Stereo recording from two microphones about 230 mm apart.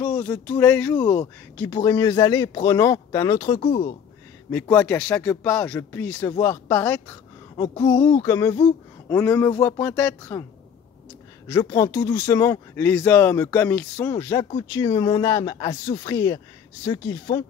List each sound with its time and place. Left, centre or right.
0.0 s a woman's voice: centre
3.6 s speech: left
4.5 s a woman's voice: centre
11.4 s a woman's voice: centre